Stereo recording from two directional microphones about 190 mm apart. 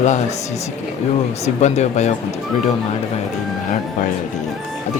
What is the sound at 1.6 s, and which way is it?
Speech, 35° left (ahead or behind).